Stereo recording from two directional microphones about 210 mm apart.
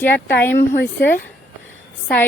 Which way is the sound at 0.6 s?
55° left (ahead or behind).